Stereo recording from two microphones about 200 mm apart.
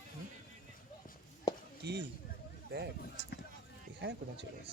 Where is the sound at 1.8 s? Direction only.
55° right (ahead or behind).